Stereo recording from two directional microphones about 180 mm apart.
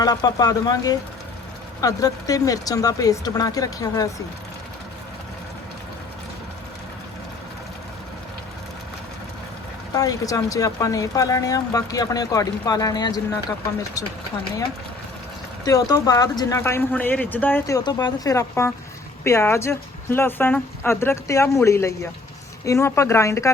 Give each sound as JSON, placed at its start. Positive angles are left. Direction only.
{"t": 0.0, "sound": "speech", "side_deg": 20}
{"t": 9.9, "sound": "speech", "side_deg": 20}
{"t": 15.6, "sound": "speech", "side_deg": 20}